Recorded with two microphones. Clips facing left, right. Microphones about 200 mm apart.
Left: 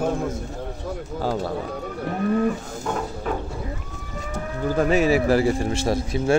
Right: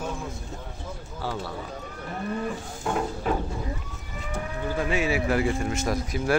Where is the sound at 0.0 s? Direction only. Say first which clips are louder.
Left 9 dB; 55° left (ahead or behind).